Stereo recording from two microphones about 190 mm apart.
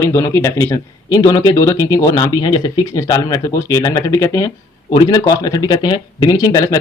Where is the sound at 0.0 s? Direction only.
15° left (ahead or behind).